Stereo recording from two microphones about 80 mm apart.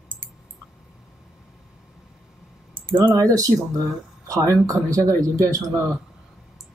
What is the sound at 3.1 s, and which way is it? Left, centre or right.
Speech, right.